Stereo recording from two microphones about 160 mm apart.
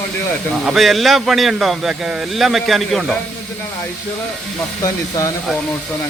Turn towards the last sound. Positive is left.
turn(degrees=20)  # may be behind; listen again after turning